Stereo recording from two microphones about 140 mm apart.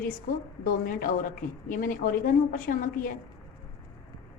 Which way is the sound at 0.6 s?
85° left.